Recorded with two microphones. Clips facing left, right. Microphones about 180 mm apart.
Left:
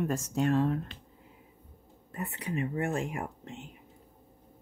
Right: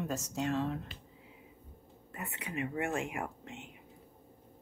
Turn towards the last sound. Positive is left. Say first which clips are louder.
# left 2 dB
turn(degrees=35)  # may be behind; listen again after turning